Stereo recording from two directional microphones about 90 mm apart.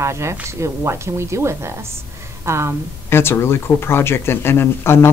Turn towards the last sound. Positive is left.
turn(degrees=25)  # may be behind; listen again after turning